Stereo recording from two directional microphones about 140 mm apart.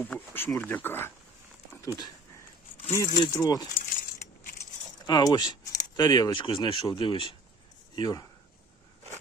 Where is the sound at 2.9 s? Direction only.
25° left (ahead or behind).